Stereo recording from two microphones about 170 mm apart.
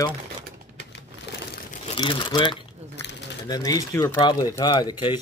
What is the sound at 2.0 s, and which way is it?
Speech, 30° left (ahead or behind).